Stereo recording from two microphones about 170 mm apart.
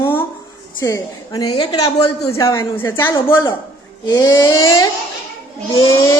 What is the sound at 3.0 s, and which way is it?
A woman's voice, 25° left (ahead or behind).